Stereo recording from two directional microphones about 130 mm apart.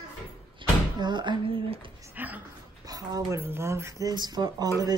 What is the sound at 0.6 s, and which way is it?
Cupboard open or close, 40° right (ahead or behind).